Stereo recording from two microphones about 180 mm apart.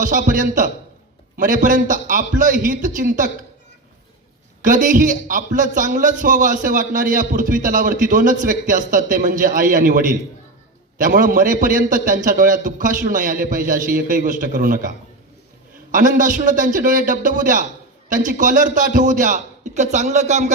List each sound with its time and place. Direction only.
0.0 s a man's voice: 50° right (ahead or behind)
4.6 s a man's voice: 45° right (ahead or behind)